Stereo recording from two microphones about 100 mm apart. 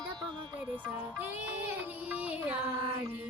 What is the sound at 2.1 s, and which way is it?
Music, 15° right (ahead or behind).